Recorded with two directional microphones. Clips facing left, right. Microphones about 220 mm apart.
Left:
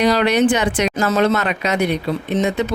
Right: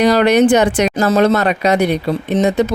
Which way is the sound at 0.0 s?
45° right (ahead or behind).